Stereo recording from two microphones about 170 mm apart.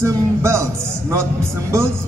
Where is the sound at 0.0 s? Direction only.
15° right (ahead or behind).